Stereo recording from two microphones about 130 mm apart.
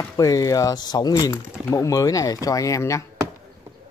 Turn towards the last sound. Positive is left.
turn(degrees=25)  # may be behind; listen again after turning